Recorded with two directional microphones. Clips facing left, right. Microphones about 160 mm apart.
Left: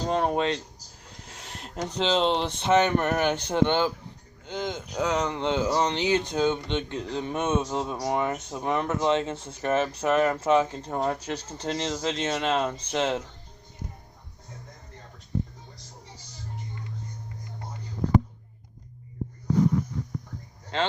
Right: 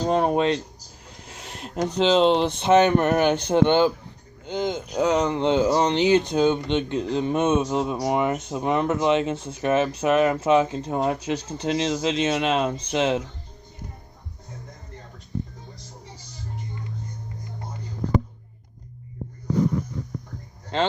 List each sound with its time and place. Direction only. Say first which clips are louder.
0.1 s speech: right 4 dB; 15° right (ahead or behind)
1.3 s a sound: right 4 dB; 15° right (ahead or behind)
2.0 s speech: right 6 dB; 10° right (ahead or behind)